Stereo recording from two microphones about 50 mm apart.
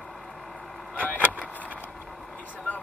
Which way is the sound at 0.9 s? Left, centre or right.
Left.